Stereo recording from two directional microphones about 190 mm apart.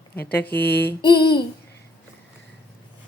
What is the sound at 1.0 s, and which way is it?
Child singing, 25° left (ahead or behind).